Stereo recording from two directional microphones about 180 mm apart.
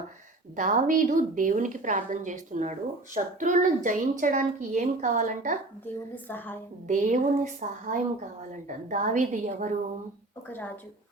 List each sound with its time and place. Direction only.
0.5 s a woman's voice: 45° right (ahead or behind)
5.8 s a woman's voice: 10° left (ahead or behind)
6.8 s a woman's voice: 45° right (ahead or behind)
10.5 s a woman's voice: 10° left (ahead or behind)